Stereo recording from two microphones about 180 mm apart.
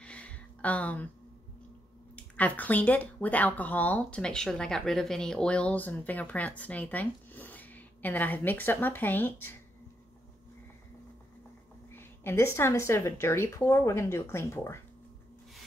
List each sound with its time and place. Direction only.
0.0 s a sound: 5° left (ahead or behind)
2.1 s speech: 10° left (ahead or behind)
11.9 s speech: 10° left (ahead or behind)